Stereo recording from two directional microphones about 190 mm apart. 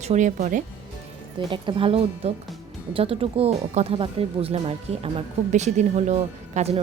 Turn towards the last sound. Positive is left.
turn(degrees=-35)  # may be behind; listen again after turning